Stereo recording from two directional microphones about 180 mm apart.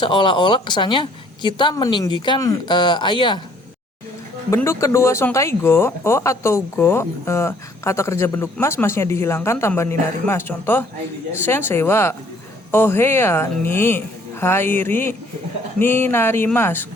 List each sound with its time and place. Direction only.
0.0 s speech: 25° left (ahead or behind)
4.5 s speech: 15° left (ahead or behind)